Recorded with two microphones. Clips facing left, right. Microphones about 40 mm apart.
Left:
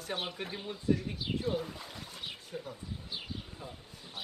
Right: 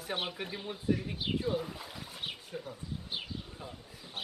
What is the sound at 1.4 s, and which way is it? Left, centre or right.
Speech, centre.